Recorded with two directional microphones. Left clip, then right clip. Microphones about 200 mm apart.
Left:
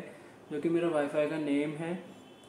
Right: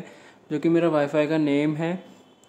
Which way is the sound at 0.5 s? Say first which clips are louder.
Right 9 dB; 40° right (ahead or behind).